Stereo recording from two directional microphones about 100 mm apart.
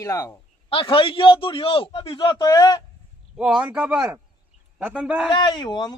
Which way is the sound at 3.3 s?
10° right (ahead or behind).